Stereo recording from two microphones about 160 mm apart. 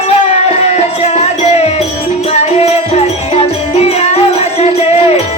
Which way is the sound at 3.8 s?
40° left (ahead or behind).